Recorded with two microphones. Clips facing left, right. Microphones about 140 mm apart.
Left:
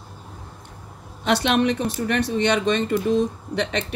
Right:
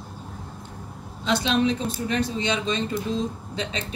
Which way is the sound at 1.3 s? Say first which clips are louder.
Left 3 dB; 65° left (ahead or behind).